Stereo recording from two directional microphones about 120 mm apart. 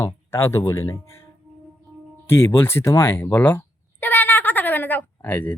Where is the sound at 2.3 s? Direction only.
20° left (ahead or behind).